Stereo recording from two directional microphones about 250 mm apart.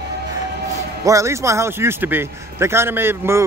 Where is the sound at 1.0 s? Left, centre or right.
Centre.